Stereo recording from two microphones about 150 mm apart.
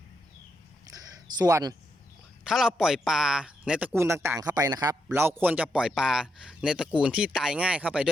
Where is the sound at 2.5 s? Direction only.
5° right (ahead or behind); by 4.9 s 25° right (ahead or behind).